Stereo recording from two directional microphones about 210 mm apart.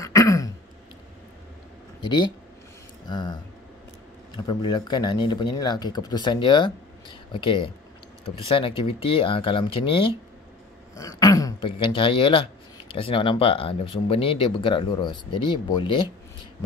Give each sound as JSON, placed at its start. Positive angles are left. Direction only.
{"t": 0.0, "sound": "throat clearing", "side_deg": 15}
{"t": 3.1, "sound": "speech", "side_deg": 20}
{"t": 4.4, "sound": "speech", "side_deg": 20}